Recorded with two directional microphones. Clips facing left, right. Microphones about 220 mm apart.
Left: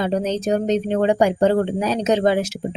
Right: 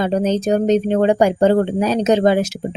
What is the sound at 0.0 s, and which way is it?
Speech, 45° right (ahead or behind).